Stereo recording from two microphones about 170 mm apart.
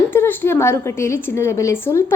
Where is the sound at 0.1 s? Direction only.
10° left (ahead or behind).